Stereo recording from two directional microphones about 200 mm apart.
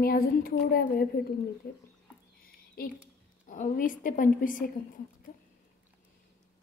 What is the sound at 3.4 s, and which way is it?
A woman's voice, 40° left (ahead or behind).